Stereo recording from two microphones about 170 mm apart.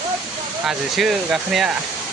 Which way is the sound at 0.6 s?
5° right (ahead or behind).